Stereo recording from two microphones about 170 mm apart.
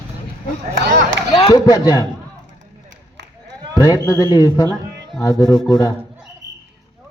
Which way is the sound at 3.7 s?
20° left (ahead or behind).